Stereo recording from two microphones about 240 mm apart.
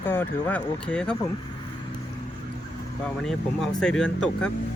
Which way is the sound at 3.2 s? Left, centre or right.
Centre.